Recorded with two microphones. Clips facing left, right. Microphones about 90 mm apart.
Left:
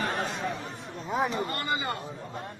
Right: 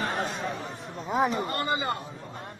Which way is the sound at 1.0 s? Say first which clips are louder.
Right 3 dB; centre (ahead or behind).